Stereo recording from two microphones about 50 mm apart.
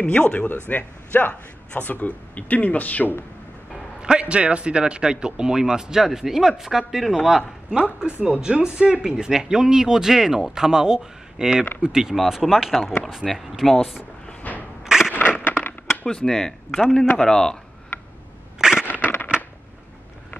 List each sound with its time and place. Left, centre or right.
0.0 s speech: left
0.7 s a man's voice: left
4.0 s speech: right
8.0 s speech: right; by 14.0 s centre
14.5 s a sound: left
14.9 s crushing: centre
15.1 s a sound: left
16.1 s speech: centre
18.6 s a sound: centre